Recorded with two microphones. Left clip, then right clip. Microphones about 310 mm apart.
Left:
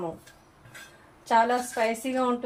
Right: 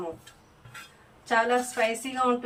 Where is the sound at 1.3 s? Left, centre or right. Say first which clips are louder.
Left 1 dB; left.